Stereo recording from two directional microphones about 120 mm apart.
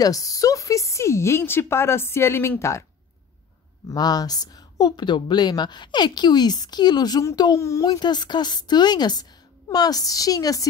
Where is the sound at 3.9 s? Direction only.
35° left (ahead or behind).